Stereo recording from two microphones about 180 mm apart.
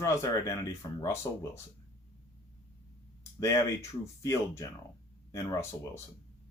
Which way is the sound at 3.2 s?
15° left (ahead or behind).